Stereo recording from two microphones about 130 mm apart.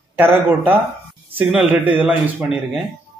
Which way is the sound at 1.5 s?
10° right (ahead or behind).